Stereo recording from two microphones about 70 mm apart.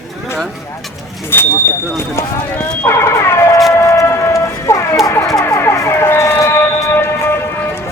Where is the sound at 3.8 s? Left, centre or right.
Left.